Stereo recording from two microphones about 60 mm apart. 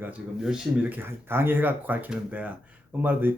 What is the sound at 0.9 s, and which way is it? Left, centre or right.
Speech, right.